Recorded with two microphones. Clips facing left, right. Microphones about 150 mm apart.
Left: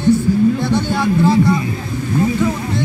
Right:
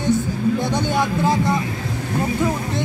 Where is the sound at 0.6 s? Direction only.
15° right (ahead or behind).